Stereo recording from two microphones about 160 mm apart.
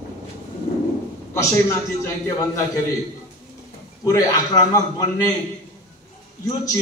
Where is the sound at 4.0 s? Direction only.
20° left (ahead or behind).